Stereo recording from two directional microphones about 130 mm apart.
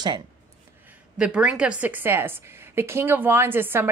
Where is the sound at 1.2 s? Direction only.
5° right (ahead or behind).